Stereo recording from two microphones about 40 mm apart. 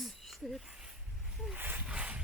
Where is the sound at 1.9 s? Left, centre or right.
Right.